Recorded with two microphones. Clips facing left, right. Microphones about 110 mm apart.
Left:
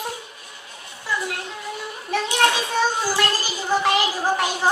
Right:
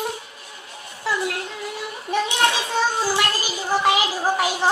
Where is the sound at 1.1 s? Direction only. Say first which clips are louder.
Right 2 dB; 90° right.